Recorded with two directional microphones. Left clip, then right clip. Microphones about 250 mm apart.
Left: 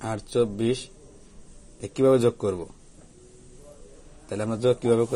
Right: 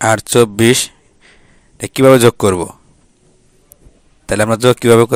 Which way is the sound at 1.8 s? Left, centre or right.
Right.